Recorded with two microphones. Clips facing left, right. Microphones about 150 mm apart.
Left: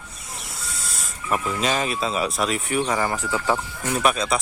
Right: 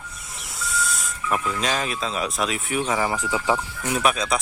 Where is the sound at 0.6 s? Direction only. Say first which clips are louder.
Right 7 dB; centre (ahead or behind).